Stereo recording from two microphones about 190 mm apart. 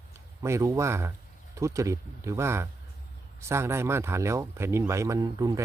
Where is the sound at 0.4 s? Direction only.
15° right (ahead or behind).